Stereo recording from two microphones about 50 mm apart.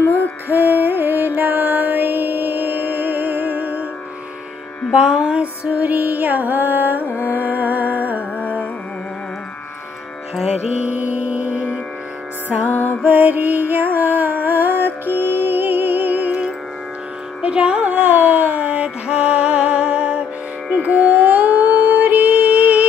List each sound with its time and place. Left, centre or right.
0.0 s music: left
0.5 s music: right
4.9 s music: centre
5.8 s music: right
10.9 s music: right
12.6 s music: left
13.0 s music: right
16.3 s music: right